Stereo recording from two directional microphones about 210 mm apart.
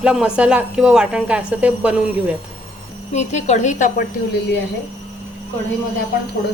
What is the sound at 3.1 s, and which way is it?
Speech, 35° left (ahead or behind).